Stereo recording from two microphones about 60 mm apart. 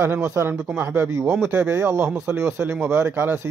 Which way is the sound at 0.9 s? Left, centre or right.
Right.